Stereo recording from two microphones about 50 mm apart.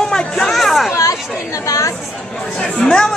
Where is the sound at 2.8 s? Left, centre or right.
Centre.